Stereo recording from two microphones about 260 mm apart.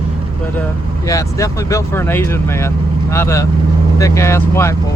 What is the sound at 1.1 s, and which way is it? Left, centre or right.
Speech, centre.